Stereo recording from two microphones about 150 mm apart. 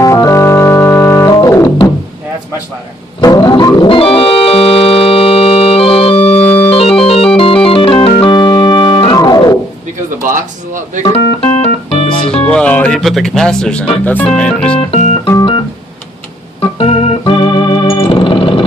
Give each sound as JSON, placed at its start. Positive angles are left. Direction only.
{"t": 0.0, "sound": "organ", "side_deg": 20}
{"t": 3.2, "sound": "organ", "side_deg": 25}
{"t": 6.4, "sound": "organ", "side_deg": 10}
{"t": 6.7, "sound": "organ", "side_deg": 40}
{"t": 7.0, "sound": "music", "side_deg": 40}
{"t": 7.3, "sound": "organ", "side_deg": 35}
{"t": 11.1, "sound": "organ", "side_deg": 45}
{"t": 12.5, "sound": "speech", "side_deg": 5}
{"t": 14.8, "sound": "organ", "side_deg": 45}
{"t": 15.3, "sound": "organ", "side_deg": 30}
{"t": 16.7, "sound": "organ", "side_deg": 40}